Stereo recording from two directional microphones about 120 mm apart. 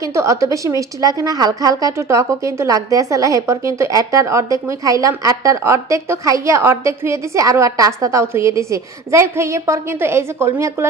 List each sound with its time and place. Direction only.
0.0 s a woman's voice: 25° right (ahead or behind)